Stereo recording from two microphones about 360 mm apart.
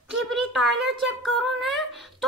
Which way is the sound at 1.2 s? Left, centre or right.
Centre.